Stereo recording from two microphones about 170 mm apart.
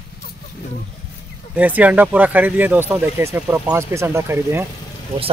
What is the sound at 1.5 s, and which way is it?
Speech, 10° right (ahead or behind).